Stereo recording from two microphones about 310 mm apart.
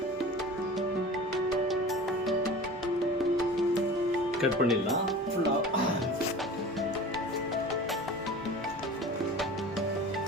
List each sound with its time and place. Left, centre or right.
4.4 s speech: centre